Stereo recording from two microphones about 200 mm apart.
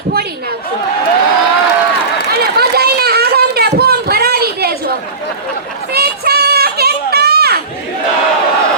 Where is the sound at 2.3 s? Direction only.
50° right (ahead or behind).